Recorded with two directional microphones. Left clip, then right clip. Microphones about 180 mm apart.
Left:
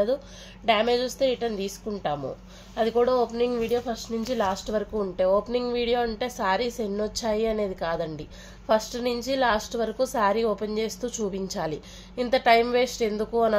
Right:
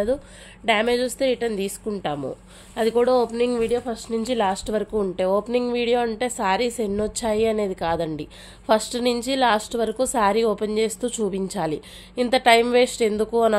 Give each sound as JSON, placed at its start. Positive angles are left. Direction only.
{"t": 0.7, "sound": "a woman's voice", "side_deg": -45}